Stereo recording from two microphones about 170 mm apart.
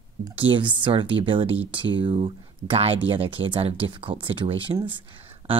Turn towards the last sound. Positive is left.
turn(degrees=-30)  # may be behind; listen again after turning